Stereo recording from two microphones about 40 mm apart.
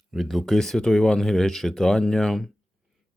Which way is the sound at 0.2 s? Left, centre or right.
Centre.